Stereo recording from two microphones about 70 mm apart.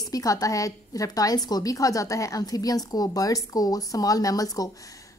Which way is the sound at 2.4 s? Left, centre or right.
Left.